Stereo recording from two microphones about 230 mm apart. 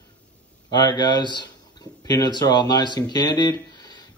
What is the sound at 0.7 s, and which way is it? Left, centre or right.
Speech, centre.